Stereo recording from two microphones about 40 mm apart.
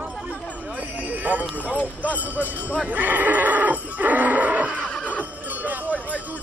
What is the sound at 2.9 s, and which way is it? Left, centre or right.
Neigh, right.